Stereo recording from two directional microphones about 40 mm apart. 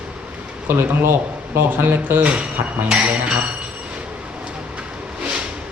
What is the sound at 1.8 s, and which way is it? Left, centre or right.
Speech, right.